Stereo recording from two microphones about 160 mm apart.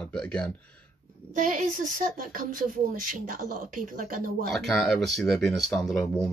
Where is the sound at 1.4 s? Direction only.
55° right (ahead or behind).